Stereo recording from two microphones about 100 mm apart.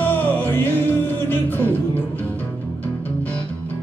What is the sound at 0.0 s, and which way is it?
Music, 20° left (ahead or behind).